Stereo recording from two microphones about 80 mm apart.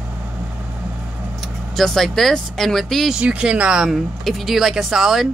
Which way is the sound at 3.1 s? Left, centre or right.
Centre.